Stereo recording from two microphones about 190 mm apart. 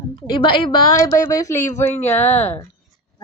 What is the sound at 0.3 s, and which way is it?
A woman's voice, 25° left (ahead or behind).